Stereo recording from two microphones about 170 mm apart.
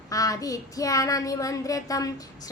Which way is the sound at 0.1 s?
20° left (ahead or behind).